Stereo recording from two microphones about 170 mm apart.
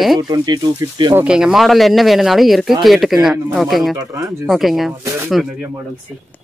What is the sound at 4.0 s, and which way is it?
Speech, 15° right (ahead or behind).